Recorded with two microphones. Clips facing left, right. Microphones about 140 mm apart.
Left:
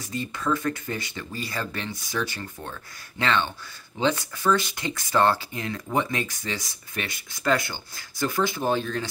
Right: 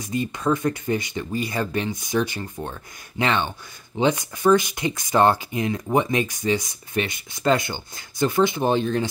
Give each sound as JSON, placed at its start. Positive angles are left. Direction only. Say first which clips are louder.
{"t": 0.0, "sound": "speech", "louder": "right 5 dB", "side_deg": -20}